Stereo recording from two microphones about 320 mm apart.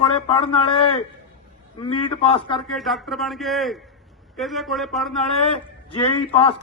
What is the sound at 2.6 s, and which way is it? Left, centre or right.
Speech, centre.